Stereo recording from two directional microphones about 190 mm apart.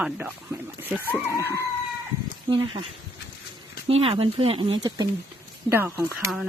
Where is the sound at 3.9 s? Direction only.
30° right (ahead or behind).